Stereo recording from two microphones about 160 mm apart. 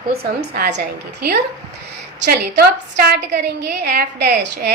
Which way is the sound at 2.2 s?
80° right.